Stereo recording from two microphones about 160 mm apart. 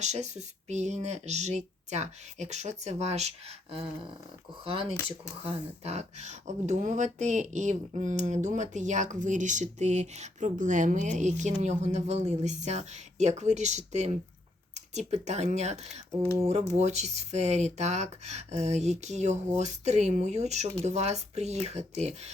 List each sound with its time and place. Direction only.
0.0 s speech: 45° right (ahead or behind)